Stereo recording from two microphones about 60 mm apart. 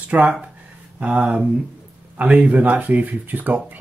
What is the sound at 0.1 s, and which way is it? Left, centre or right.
Speech, centre.